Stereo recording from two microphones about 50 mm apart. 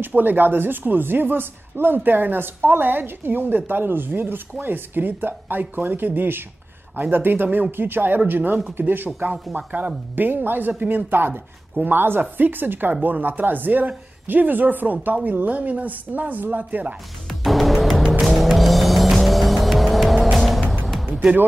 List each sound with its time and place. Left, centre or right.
0.0 s speech: right
17.3 s music: centre